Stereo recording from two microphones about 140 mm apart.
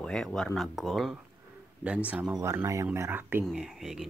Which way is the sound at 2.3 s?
20° right (ahead or behind).